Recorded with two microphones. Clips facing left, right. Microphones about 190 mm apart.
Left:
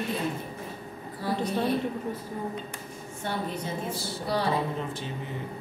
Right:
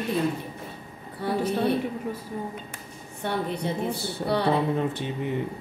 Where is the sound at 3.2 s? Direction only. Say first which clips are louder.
Right 4 dB; 60° right (ahead or behind).